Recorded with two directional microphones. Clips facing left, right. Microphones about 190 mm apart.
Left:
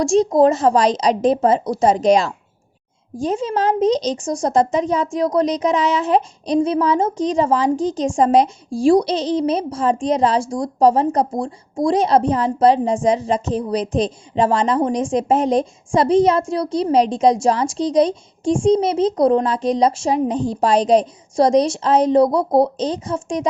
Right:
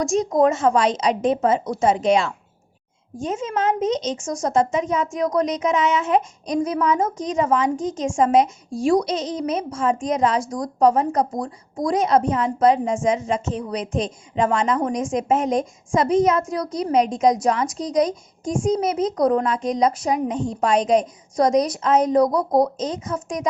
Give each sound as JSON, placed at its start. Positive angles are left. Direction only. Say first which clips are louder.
{"t": 0.0, "sound": "a woman's voice", "louder": "left 4 dB", "side_deg": 30}